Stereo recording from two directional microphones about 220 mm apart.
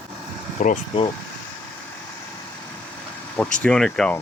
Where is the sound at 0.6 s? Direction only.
35° left (ahead or behind).